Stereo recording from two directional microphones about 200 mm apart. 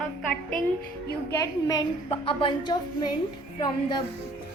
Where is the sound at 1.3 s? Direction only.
15° left (ahead or behind).